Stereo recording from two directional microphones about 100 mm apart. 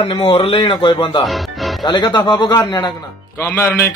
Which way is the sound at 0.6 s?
55° left (ahead or behind).